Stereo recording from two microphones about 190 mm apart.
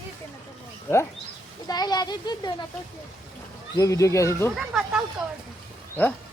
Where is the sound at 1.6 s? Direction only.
20° left (ahead or behind).